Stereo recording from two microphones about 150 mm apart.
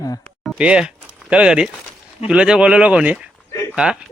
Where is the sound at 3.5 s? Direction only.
20° left (ahead or behind).